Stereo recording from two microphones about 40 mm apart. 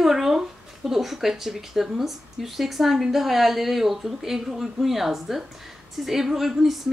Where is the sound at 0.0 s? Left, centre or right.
Centre.